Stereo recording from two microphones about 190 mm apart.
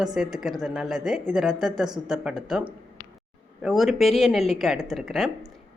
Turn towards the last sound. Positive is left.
turn(degrees=0)  # may be behind; listen again after turning